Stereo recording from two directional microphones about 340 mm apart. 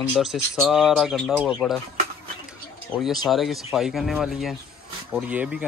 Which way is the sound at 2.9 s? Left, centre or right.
Centre.